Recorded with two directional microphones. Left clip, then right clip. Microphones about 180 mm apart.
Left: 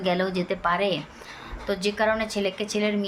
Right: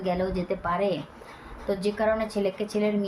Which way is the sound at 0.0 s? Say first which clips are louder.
Left 3 dB; 10° left (ahead or behind).